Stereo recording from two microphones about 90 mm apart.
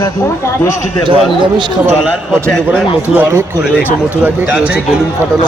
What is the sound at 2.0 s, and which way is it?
Speech, 5° left (ahead or behind).